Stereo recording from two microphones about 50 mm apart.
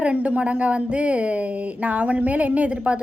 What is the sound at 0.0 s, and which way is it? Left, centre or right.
A woman's voice, right.